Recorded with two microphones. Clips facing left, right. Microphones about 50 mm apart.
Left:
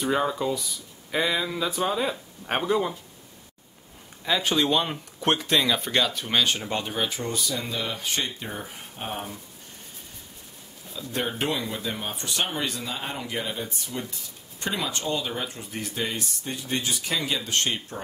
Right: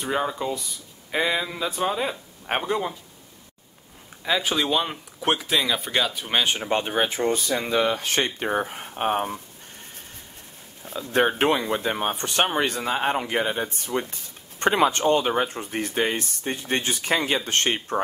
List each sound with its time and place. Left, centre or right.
0.0 s speech: centre
4.2 s speech: centre; by 7.8 s right
7.8 s speech: right
10.9 s speech: right